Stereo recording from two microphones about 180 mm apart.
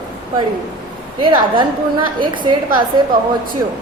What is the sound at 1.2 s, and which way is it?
A woman's voice, 25° right (ahead or behind).